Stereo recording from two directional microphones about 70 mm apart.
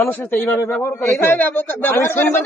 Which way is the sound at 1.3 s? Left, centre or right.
Left.